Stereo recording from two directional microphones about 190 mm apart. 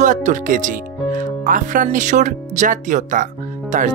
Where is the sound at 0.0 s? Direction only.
40° right (ahead or behind).